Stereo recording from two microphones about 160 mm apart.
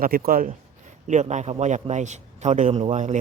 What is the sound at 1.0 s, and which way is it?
A man's voice, 50° right (ahead or behind).